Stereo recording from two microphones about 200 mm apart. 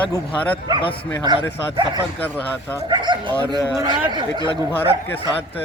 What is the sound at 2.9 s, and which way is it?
Speech, 20° right (ahead or behind).